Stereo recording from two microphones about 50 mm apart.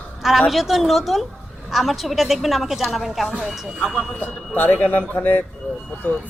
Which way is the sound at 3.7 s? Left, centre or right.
Centre.